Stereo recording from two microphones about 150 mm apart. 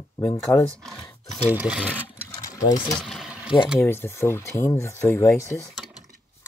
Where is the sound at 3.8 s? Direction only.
15° left (ahead or behind).